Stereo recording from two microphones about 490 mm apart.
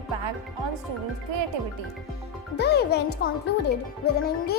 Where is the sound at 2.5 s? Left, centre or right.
Centre.